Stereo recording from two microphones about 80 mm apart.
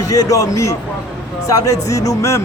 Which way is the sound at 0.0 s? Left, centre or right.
Left.